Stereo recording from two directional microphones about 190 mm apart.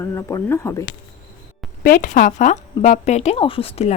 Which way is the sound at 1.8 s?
45° left (ahead or behind).